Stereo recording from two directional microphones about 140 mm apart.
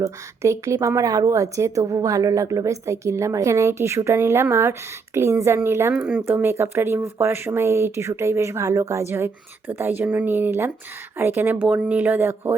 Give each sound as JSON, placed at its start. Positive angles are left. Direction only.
{"t": 0.0, "sound": "a woman's voice", "side_deg": -20}